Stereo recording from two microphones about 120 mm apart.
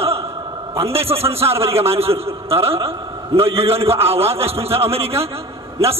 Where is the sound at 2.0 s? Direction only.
55° right (ahead or behind).